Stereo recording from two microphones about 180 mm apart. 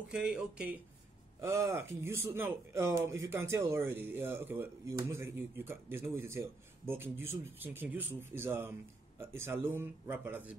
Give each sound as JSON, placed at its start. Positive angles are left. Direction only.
{"t": 0.1, "sound": "speech", "side_deg": -5}
{"t": 1.4, "sound": "speech", "side_deg": -15}